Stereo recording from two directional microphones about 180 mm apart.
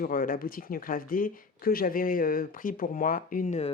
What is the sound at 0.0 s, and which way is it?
Speech, 50° left (ahead or behind).